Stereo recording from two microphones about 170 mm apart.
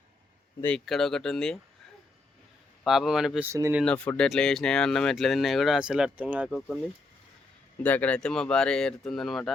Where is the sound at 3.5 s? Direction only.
15° right (ahead or behind).